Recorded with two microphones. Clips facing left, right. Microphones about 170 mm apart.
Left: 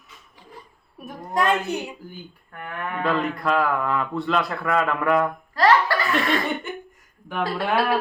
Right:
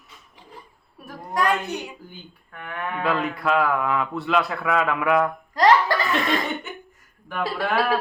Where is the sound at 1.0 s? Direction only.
25° left (ahead or behind).